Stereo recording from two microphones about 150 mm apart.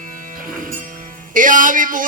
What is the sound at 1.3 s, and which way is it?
Music, 60° right (ahead or behind).